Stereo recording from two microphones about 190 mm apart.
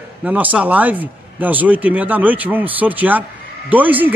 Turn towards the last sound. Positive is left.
turn(degrees=-10)  # may be behind; listen again after turning